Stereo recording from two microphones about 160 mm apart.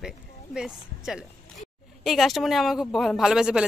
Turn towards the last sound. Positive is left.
turn(degrees=-5)  # may be behind; listen again after turning